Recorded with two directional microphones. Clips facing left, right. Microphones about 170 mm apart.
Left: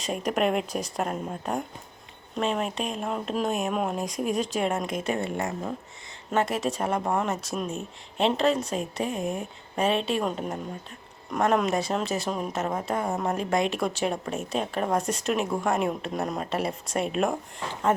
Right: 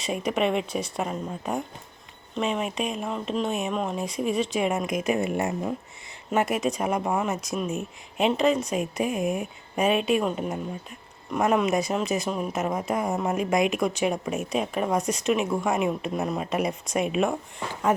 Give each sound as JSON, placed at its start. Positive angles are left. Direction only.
{"t": 0.0, "sound": "speech", "side_deg": -5}
{"t": 13.1, "sound": "speech", "side_deg": 0}
{"t": 13.4, "sound": "speech", "side_deg": -10}